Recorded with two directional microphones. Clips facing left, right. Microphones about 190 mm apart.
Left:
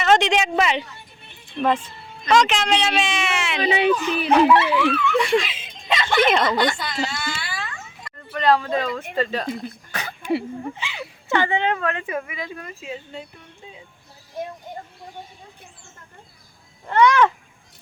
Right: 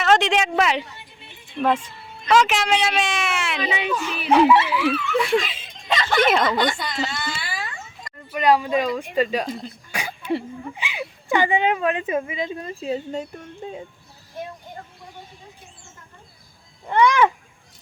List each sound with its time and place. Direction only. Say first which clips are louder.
0.0 s a sound: left 1 dB; centre (ahead or behind)
1.6 s speech: even; 5° right (ahead or behind)
3.6 s speech: left 9 dB; 35° left (ahead or behind)
4.3 s speech: even; 5° right (ahead or behind)
7.6 s a sound: even; 10° right (ahead or behind)
9.1 s speech: right 2 dB; 15° right (ahead or behind)
9.9 s a sound: right 4 dB; 10° right (ahead or behind)
10.8 s a woman's voice: right 2 dB; 15° right (ahead or behind); by 13.8 s 45° right (ahead or behind)
16.8 s speech: left 1 dB; 10° right (ahead or behind)